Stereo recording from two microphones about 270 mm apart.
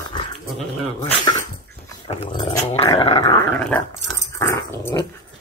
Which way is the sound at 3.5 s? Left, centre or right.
Centre.